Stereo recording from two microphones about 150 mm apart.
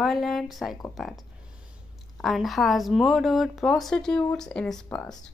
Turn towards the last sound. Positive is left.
turn(degrees=5)  # may be behind; listen again after turning